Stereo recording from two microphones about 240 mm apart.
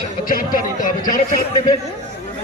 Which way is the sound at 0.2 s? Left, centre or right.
Left.